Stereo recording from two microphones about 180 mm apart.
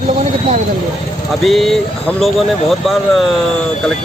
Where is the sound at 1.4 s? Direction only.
Centre (ahead or behind).